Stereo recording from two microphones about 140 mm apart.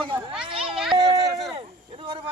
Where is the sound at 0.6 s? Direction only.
5° right (ahead or behind).